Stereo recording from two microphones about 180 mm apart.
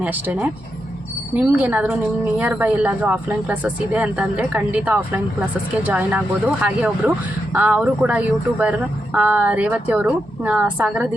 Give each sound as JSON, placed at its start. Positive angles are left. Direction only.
{"t": 0.0, "sound": "speech", "side_deg": -10}